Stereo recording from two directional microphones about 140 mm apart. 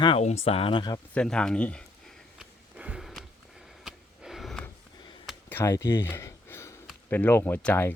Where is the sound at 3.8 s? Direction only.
5° right (ahead or behind).